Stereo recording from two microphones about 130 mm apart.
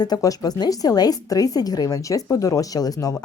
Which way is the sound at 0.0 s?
30° left (ahead or behind).